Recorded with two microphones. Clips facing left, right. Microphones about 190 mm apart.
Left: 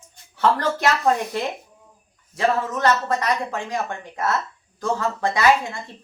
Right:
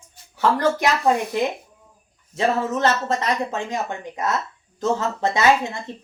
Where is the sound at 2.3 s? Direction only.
25° right (ahead or behind).